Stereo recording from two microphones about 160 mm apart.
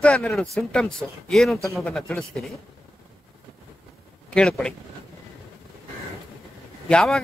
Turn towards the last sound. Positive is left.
turn(degrees=5)  # may be behind; listen again after turning